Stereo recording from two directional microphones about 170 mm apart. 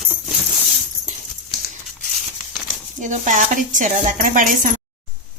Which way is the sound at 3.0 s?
45° right (ahead or behind).